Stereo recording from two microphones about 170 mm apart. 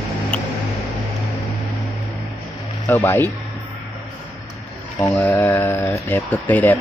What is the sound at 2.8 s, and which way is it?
Speech, 10° left (ahead or behind).